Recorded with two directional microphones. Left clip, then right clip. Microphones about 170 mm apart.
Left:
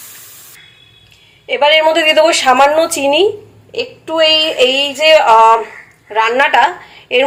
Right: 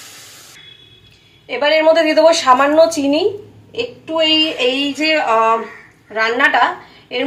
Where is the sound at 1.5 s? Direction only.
40° left (ahead or behind).